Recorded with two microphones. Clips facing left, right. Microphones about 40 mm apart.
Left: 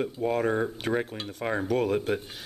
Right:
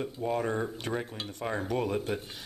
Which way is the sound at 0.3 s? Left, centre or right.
Centre.